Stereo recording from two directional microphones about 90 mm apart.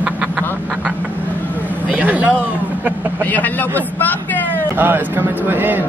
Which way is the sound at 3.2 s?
20° left (ahead or behind).